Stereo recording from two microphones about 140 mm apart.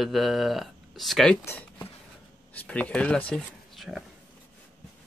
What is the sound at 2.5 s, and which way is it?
Speech, 10° left (ahead or behind).